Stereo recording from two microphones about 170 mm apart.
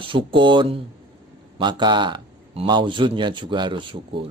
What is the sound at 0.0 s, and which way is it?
A man's voice, 30° right (ahead or behind).